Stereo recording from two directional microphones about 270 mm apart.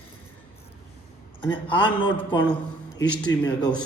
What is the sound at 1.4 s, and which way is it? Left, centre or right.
A man's voice, centre.